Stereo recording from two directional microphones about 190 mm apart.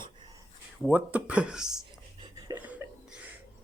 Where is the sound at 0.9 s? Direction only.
10° right (ahead or behind).